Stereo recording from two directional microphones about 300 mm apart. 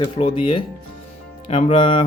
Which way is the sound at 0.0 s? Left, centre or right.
Centre.